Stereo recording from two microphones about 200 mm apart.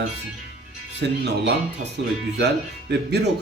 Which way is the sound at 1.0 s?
60° right (ahead or behind).